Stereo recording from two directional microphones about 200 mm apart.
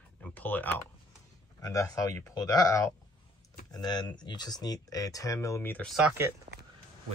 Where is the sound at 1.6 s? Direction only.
15° left (ahead or behind); by 6.3 s 10° right (ahead or behind).